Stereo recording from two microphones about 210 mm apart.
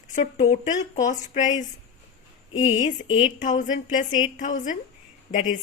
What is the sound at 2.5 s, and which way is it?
Speech, 65° left (ahead or behind).